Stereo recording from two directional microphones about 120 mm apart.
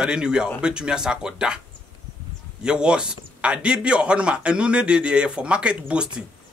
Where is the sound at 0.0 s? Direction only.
5° right (ahead or behind).